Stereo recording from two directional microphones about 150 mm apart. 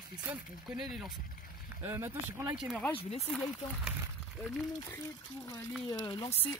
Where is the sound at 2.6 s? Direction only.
Centre (ahead or behind).